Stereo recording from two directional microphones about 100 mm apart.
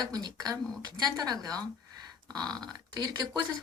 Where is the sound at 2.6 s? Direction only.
40° right (ahead or behind).